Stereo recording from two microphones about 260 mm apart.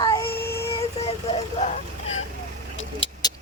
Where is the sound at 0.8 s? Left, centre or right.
Left.